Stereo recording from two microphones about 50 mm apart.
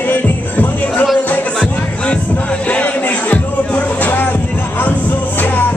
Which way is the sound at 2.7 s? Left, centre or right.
Left.